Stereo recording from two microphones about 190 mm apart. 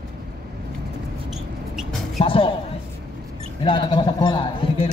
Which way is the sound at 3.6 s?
25° left (ahead or behind).